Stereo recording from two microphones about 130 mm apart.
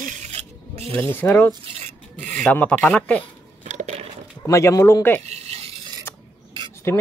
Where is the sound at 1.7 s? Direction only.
65° right (ahead or behind).